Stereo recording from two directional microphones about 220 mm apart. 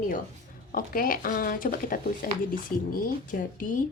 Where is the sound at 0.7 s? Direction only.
40° left (ahead or behind).